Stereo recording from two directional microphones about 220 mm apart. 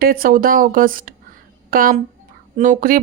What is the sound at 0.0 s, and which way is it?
Speech, 40° right (ahead or behind).